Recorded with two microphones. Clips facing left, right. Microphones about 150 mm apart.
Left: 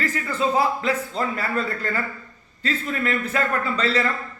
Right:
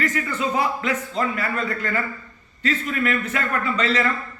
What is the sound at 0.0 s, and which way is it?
A man's voice, 30° left (ahead or behind).